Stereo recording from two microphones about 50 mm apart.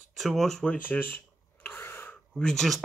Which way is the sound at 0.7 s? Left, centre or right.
Left.